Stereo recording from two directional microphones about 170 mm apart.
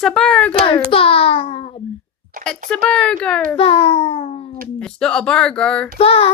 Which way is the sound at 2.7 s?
5° left (ahead or behind).